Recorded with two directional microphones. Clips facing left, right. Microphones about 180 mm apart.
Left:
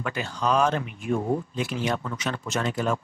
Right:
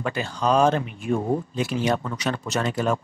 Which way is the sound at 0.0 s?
30° right (ahead or behind).